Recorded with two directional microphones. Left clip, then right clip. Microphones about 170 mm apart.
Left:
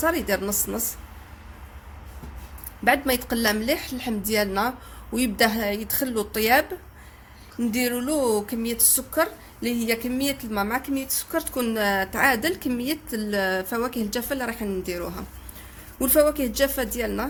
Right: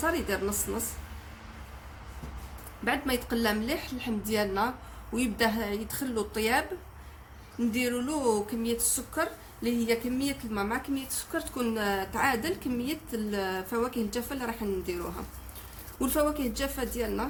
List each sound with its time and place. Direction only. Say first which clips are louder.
0.0 s a woman's voice: left 6 dB; 50° left (ahead or behind)
2.8 s a woman's voice: left 8 dB; 50° left (ahead or behind)
7.7 s a woman's voice: left 6 dB; 45° left (ahead or behind)